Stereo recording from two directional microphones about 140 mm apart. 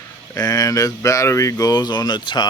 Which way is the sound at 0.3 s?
25° left (ahead or behind).